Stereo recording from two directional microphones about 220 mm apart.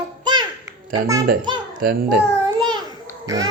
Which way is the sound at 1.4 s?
20° right (ahead or behind).